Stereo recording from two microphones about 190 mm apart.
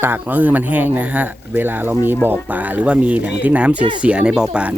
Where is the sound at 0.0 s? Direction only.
10° right (ahead or behind).